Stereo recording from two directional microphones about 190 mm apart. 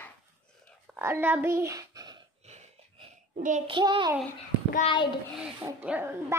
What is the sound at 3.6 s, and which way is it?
Speech, 25° right (ahead or behind).